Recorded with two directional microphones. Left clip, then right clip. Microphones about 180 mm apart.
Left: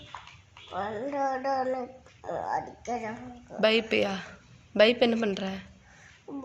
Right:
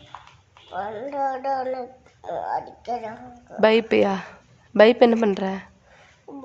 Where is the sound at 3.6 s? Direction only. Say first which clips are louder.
Right 7 dB; 45° right (ahead or behind).